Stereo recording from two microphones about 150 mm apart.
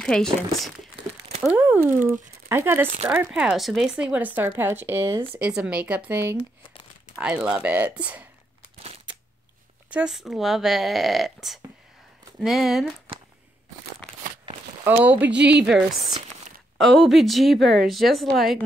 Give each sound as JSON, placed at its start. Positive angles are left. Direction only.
{"t": 0.0, "sound": "speech", "side_deg": 5}
{"t": 1.4, "sound": "speech", "side_deg": -10}
{"t": 9.8, "sound": "speech", "side_deg": -5}
{"t": 15.0, "sound": "speech", "side_deg": -10}